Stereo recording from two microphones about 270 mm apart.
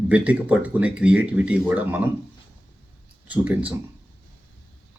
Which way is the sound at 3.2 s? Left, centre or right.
Centre.